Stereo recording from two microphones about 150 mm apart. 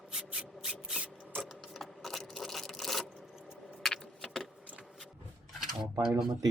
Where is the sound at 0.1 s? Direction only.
5° right (ahead or behind).